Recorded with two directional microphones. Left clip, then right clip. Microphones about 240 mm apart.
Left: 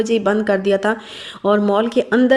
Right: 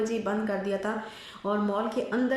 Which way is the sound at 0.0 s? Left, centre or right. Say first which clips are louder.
Left 12 dB; left.